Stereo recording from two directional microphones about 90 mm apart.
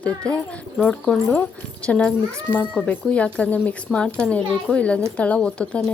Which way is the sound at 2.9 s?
15° left (ahead or behind).